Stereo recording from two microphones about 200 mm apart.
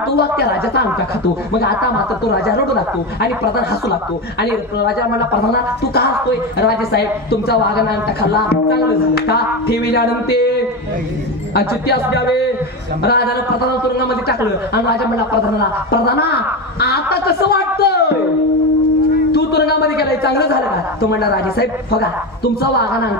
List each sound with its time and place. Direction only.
0.1 s a man's voice: 50° left (ahead or behind)
2.4 s a man's voice: 55° left (ahead or behind)
4.4 s a man's voice: 55° left (ahead or behind)
11.5 s a man's voice: 55° left (ahead or behind)
16.8 s a sound: 55° left (ahead or behind)
19.3 s a sound: 55° left (ahead or behind)
21.0 s a man's voice: 55° left (ahead or behind)